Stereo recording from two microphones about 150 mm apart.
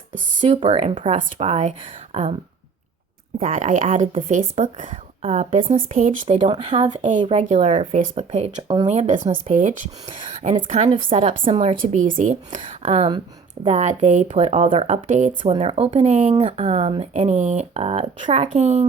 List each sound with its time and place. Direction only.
0.4 s speech: 35° right (ahead or behind)
3.4 s speech: 55° right (ahead or behind)
5.7 s speech: 65° right (ahead or behind)
6.6 s speech: 45° right (ahead or behind)
7.2 s speech: 40° right (ahead or behind)
8.6 s speech: 30° right (ahead or behind)
8.9 s speech: 55° right (ahead or behind)
10.4 s speech: 40° right (ahead or behind)
11.9 s speech: 60° right (ahead or behind)
15.5 s speech: 40° right (ahead or behind)
18.5 s speech: 50° right (ahead or behind)